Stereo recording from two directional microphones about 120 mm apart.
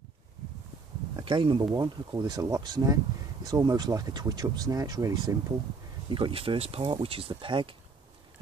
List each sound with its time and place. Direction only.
1.1 s speech: 45° right (ahead or behind)
1.6 s speech: 35° right (ahead or behind)
6.0 s speech: 45° right (ahead or behind)